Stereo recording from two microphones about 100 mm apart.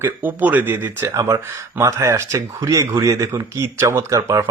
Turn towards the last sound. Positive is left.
turn(degrees=-35)  # may be behind; listen again after turning